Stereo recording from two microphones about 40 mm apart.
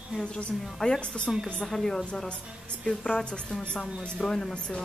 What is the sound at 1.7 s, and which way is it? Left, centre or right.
Speech, centre.